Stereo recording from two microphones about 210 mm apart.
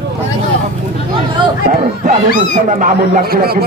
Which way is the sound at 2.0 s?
40° right (ahead or behind).